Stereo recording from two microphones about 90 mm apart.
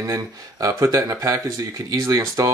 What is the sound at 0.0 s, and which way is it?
Speech, 40° right (ahead or behind).